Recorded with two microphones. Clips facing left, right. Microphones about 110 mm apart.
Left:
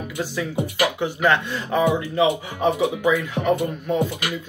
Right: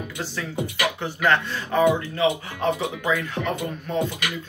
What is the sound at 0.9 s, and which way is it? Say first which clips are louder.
Speech: even; 15° left (ahead or behind).